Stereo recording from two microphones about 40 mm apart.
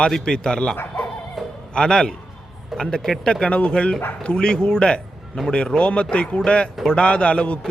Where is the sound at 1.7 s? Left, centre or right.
Centre.